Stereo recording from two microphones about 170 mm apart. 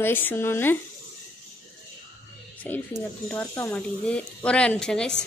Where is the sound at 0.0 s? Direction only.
10° left (ahead or behind).